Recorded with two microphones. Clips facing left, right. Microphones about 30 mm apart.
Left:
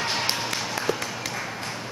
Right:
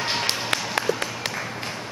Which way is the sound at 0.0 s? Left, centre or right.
Centre.